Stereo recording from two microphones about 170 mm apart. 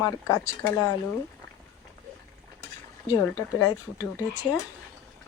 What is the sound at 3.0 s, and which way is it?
Speech, 20° left (ahead or behind).